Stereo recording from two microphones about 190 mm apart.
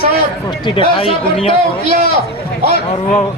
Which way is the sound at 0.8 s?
30° left (ahead or behind).